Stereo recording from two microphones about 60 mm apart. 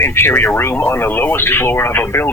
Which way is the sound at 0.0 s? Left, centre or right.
Left.